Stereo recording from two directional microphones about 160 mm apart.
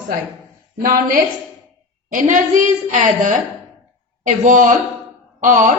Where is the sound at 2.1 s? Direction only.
55° right (ahead or behind).